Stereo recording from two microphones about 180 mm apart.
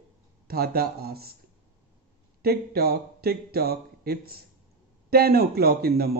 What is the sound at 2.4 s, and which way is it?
Speech, 60° right (ahead or behind).